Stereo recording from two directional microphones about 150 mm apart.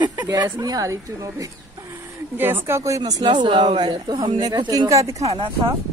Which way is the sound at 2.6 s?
20° right (ahead or behind).